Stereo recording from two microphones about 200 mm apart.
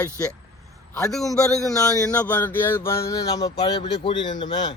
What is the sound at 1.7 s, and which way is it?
Speech, 15° left (ahead or behind).